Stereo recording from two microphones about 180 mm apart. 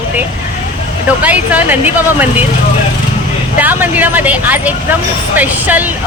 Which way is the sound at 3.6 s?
10° right (ahead or behind).